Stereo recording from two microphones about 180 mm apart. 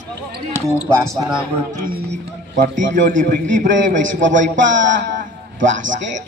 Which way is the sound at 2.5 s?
45° right (ahead or behind).